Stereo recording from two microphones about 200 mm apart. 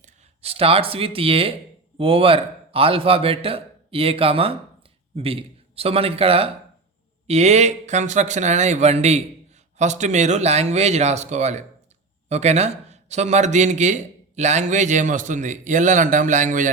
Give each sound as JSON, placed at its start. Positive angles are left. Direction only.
{"t": 0.0, "sound": "a man's voice", "side_deg": -30}